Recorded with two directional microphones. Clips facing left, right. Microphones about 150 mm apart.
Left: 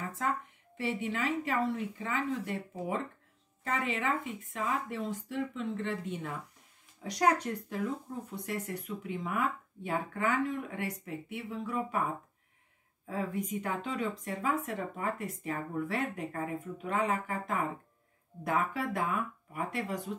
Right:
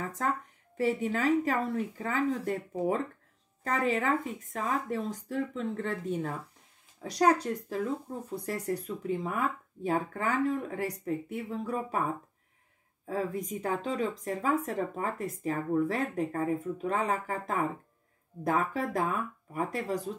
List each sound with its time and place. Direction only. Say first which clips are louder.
0.2 s speech: right 1 dB; 40° right (ahead or behind)
13.0 s speech: right 2 dB; 35° right (ahead or behind)